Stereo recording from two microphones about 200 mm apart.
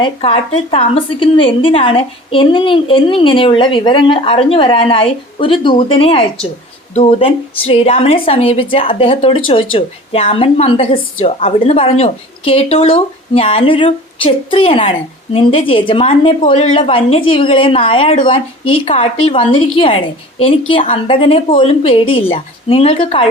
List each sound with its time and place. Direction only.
0.0 s a woman's voice: 25° left (ahead or behind)